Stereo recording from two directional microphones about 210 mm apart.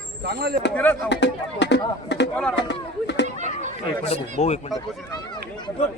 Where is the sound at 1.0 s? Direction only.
55° left (ahead or behind).